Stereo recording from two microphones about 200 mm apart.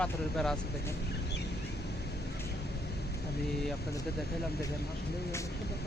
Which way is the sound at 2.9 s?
55° left (ahead or behind).